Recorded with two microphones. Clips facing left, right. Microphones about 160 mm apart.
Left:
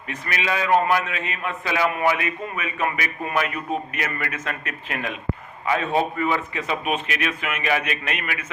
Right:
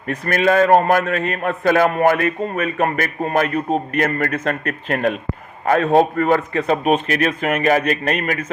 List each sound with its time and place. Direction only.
0.1 s a man's voice: 50° right (ahead or behind)